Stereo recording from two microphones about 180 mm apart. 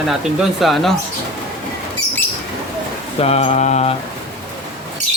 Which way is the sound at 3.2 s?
35° left (ahead or behind).